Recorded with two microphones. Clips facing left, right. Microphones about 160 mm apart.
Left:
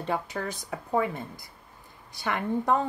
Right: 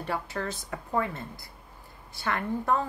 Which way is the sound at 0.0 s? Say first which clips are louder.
Left 2 dB; 20° left (ahead or behind).